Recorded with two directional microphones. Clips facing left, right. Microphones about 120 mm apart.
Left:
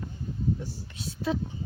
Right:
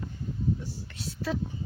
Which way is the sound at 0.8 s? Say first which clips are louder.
Left 3 dB; 20° left (ahead or behind).